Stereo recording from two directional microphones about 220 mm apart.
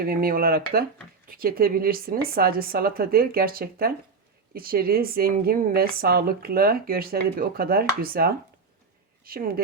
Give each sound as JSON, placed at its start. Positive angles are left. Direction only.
{"t": 0.0, "sound": "speech", "side_deg": -40}